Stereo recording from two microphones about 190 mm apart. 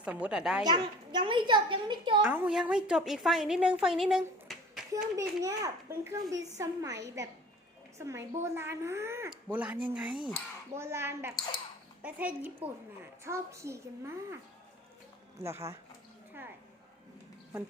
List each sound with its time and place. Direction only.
0.0 s a woman's voice: 5° right (ahead or behind)
0.6 s a woman's voice: 20° right (ahead or behind)
2.2 s a woman's voice: 10° right (ahead or behind)
5.1 s speech: 15° right (ahead or behind)
15.4 s speech: 15° right (ahead or behind)